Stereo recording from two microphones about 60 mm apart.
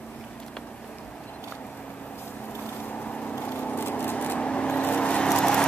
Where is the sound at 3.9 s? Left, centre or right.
Left.